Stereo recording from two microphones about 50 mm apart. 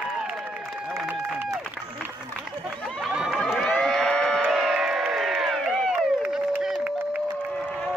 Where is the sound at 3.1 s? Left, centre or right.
Centre.